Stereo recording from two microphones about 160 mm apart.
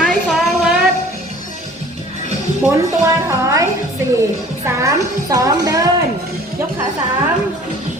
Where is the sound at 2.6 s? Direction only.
20° right (ahead or behind).